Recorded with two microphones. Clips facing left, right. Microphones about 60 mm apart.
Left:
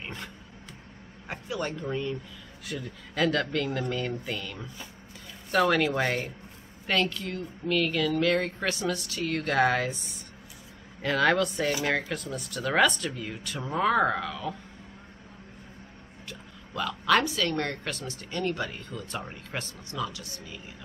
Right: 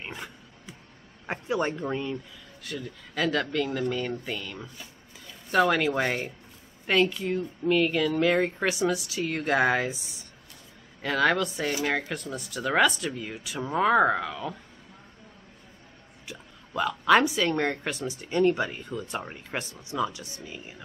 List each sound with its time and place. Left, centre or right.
0.0 s roaring cats: centre
1.2 s a man's voice: right
2.6 s speech: centre
16.3 s speech: centre